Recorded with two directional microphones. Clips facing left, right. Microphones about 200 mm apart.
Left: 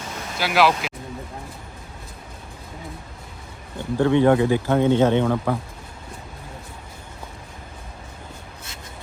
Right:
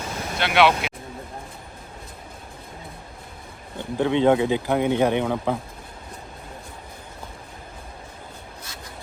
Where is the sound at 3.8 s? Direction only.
15° right (ahead or behind).